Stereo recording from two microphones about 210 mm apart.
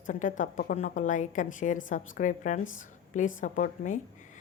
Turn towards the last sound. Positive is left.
turn(degrees=35)  # may be behind; listen again after turning